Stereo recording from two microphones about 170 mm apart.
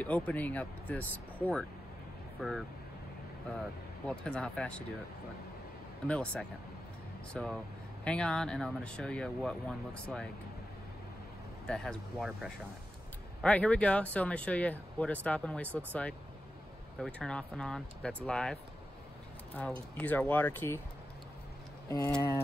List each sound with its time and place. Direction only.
0.0 s speech: 10° left (ahead or behind)
4.1 s speech: 5° left (ahead or behind)
6.0 s speech: 5° left (ahead or behind)
11.6 s speech: 5° left (ahead or behind)
21.8 s speech: 15° left (ahead or behind)